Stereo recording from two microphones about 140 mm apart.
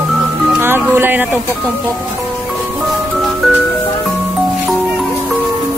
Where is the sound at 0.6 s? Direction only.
15° right (ahead or behind).